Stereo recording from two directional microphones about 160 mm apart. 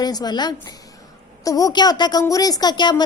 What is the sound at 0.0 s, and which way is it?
A woman's voice, 25° left (ahead or behind).